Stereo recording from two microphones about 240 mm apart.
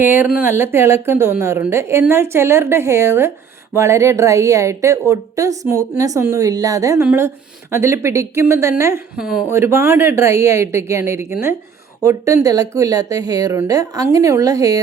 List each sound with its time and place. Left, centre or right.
0.0 s a woman's voice: centre